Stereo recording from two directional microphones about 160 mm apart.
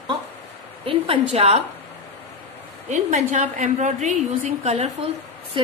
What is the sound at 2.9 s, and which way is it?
A woman's voice, 45° right (ahead or behind).